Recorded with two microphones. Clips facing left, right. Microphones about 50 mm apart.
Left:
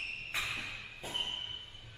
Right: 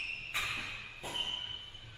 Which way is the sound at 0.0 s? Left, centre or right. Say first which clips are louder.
Even; centre.